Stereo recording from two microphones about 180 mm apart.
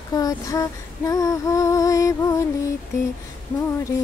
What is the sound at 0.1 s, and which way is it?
Female singing, 20° left (ahead or behind).